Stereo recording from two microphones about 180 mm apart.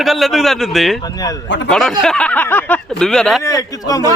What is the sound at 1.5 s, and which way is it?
Speech, 80° left.